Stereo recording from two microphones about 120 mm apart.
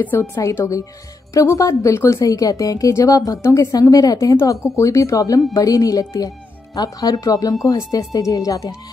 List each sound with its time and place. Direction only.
0.0 s a woman's voice: 20° left (ahead or behind)